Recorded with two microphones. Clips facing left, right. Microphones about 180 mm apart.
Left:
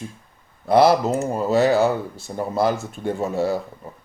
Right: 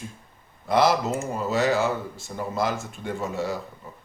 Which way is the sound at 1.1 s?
35° left (ahead or behind).